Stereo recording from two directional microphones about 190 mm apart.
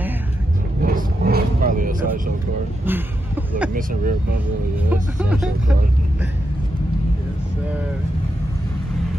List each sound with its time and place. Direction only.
0.8 s vehicle: 50° right (ahead or behind)
2.8 s speech: 10° right (ahead or behind)